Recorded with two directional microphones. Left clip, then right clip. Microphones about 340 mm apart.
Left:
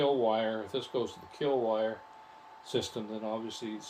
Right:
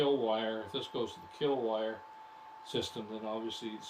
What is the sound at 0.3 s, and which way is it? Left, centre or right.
Speech, centre.